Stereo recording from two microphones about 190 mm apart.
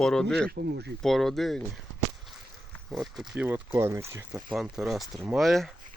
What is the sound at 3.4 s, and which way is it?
Speech, 15° right (ahead or behind).